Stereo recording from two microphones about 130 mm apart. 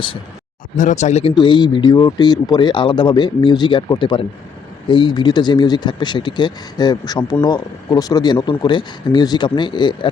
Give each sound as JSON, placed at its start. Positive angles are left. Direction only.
{"t": 0.8, "sound": "speech", "side_deg": 70}
{"t": 1.4, "sound": "speech", "side_deg": 35}